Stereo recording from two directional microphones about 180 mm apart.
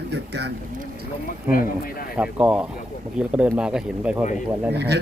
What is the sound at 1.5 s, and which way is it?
Speech, 50° left (ahead or behind).